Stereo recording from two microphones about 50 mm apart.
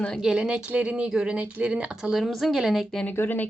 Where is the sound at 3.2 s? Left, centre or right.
Left.